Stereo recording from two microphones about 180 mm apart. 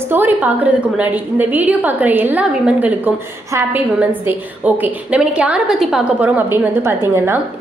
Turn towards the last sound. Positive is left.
turn(degrees=-10)  # may be behind; listen again after turning